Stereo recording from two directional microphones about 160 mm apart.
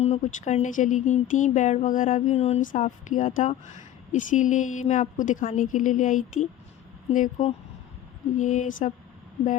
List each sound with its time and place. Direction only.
0.0 s speech: 40° left (ahead or behind)